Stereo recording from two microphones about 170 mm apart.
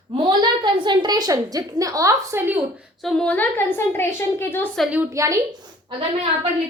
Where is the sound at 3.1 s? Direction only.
5° left (ahead or behind).